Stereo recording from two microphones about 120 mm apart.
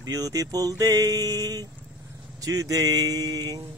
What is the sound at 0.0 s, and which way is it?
Speech, 30° right (ahead or behind).